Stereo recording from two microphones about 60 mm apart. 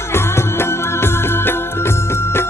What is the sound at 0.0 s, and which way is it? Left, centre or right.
Music, left.